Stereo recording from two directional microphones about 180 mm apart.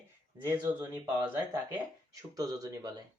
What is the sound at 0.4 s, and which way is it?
Speech, 10° right (ahead or behind).